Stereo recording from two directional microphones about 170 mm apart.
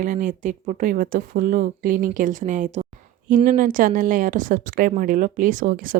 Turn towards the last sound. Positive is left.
turn(degrees=-55)  # may be behind; listen again after turning